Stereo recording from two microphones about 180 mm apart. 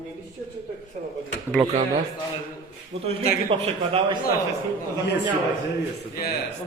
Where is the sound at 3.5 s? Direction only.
30° right (ahead or behind).